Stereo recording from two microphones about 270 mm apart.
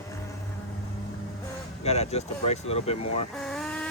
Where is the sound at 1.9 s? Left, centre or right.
Left.